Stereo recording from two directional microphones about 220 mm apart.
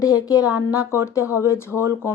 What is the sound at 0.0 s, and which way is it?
Speech, 15° left (ahead or behind).